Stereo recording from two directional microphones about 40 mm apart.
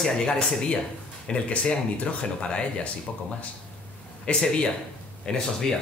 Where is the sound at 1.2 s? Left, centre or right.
Left.